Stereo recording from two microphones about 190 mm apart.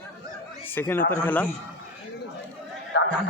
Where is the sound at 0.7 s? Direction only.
10° left (ahead or behind).